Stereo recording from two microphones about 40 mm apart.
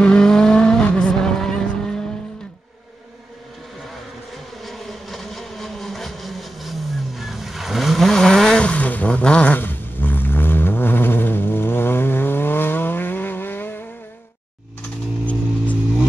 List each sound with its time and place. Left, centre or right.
0.2 s vehicle: centre
4.6 s vehicle: centre
8.1 s vehicle: centre
8.6 s vehicle: left
9.5 s a sound: left
15.2 s music: left